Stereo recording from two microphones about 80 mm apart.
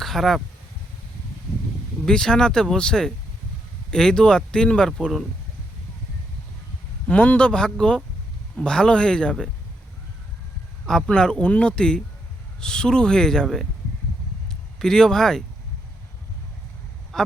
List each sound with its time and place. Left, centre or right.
0.0 s speech: centre
2.0 s speech: centre
7.1 s speech: centre
10.8 s a man's voice: centre
17.1 s quack: centre